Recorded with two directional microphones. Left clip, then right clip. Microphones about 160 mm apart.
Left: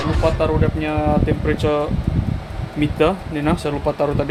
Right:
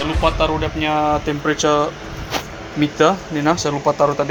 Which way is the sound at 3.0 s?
Centre (ahead or behind).